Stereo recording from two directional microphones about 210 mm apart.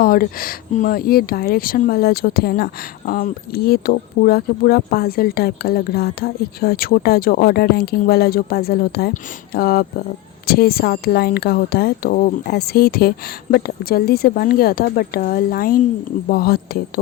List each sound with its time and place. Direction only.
0.0 s speech: 45° left (ahead or behind)